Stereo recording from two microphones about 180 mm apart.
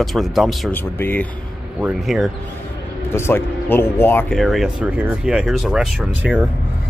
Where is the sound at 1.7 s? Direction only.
Centre (ahead or behind).